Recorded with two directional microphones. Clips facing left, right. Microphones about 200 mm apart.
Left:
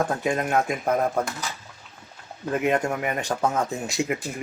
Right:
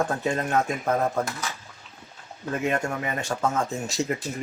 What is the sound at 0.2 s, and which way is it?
Speech, 15° left (ahead or behind).